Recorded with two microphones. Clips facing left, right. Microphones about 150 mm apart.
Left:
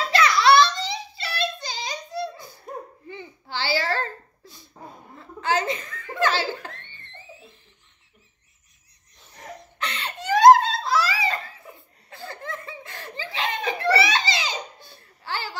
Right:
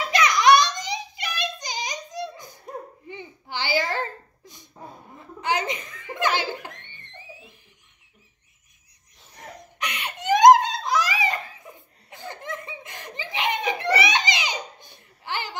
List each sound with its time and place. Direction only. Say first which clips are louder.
0.0 s child singing: even; 15° right (ahead or behind)
3.1 s a sound: right 1 dB; 15° right (ahead or behind)
5.1 s chuckle: left 2 dB; 15° right (ahead or behind)
9.6 s giggle: even; 15° right (ahead or behind)
12.1 s laughter: even; 20° right (ahead or behind)